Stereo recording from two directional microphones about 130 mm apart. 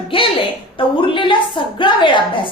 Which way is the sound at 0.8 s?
40° left (ahead or behind).